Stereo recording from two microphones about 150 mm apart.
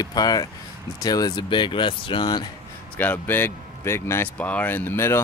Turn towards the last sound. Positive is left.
turn(degrees=15)  # may be behind; listen again after turning